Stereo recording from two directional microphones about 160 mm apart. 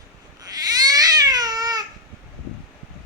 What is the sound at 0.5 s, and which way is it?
Baby cry, 25° right (ahead or behind).